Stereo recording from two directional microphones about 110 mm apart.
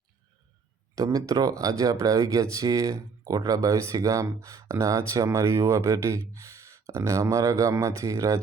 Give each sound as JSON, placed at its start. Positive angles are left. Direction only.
{"t": 0.9, "sound": "speech", "side_deg": -30}